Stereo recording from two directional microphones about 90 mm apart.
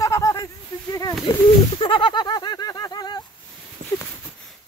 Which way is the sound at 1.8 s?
70° left (ahead or behind).